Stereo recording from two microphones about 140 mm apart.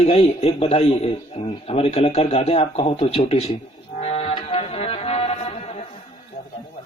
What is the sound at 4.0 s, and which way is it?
Music, 45° left (ahead or behind).